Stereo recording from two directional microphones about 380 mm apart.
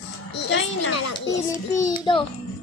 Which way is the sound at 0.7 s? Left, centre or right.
Left.